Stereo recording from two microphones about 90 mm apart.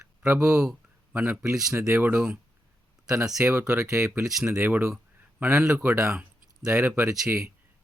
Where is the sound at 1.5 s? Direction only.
5° right (ahead or behind).